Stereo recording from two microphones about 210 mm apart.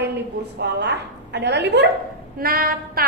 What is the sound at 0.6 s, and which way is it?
Child singing, 55° right (ahead or behind).